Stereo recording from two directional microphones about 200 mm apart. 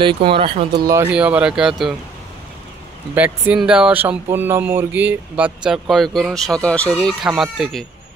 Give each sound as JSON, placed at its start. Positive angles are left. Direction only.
{"t": 0.0, "sound": "speech", "side_deg": -25}
{"t": 0.8, "sound": "speech", "side_deg": -10}
{"t": 3.2, "sound": "speech", "side_deg": -5}